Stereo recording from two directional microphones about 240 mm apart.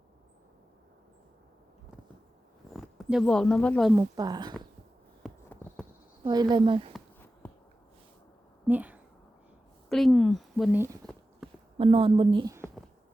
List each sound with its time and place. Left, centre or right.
2.7 s speech: centre
3.9 s speech: centre
5.2 s clip-clop: centre
6.2 s a woman's voice: centre
7.4 s a sound: centre
8.6 s a sound: centre
9.9 s speech: centre
11.0 s a sound: centre
11.8 s a woman's voice: right